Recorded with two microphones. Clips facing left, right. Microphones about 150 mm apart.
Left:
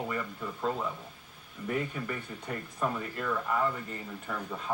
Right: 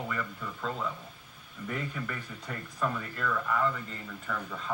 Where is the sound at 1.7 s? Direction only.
35° left (ahead or behind).